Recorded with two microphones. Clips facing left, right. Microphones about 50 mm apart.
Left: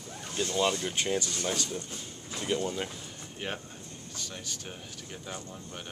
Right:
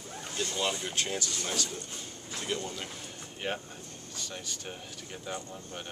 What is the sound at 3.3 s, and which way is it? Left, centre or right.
Speech, centre.